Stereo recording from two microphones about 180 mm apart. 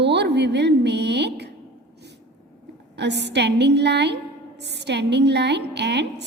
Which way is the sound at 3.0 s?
70° right (ahead or behind).